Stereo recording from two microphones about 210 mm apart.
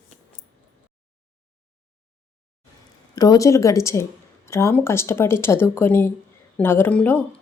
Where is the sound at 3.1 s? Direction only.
20° left (ahead or behind).